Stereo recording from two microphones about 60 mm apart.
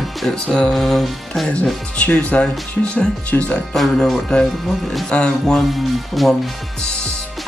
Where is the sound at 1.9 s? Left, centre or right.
Left.